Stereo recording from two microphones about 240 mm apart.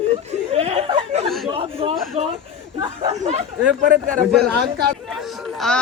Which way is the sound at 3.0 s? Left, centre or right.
Right.